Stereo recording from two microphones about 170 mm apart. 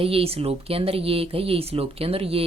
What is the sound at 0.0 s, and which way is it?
Speech, 35° right (ahead or behind).